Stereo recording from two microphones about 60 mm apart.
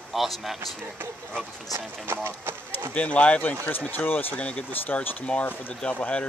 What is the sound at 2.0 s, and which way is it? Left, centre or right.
Speech, right.